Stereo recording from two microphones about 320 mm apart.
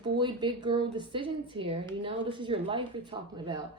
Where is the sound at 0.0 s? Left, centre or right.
Centre.